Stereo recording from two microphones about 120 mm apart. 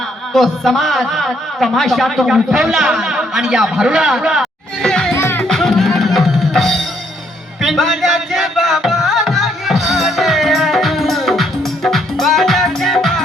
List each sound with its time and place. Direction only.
0.3 s a man's voice: centre (ahead or behind)
4.9 s music: 5° left (ahead or behind)
5.1 s music: 20° left (ahead or behind)
5.4 s music: 5° left (ahead or behind)